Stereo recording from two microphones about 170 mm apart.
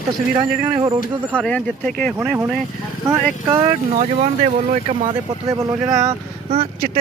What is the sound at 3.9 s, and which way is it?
Speech, 45° right (ahead or behind).